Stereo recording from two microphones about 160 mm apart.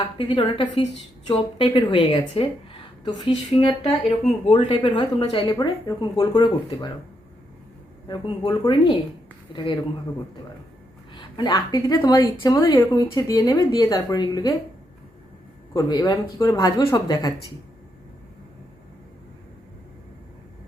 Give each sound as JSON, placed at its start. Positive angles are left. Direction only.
{"t": 0.2, "sound": "speech", "side_deg": 35}
{"t": 8.0, "sound": "speech", "side_deg": 25}
{"t": 11.1, "sound": "speech", "side_deg": 30}
{"t": 15.7, "sound": "speech", "side_deg": 25}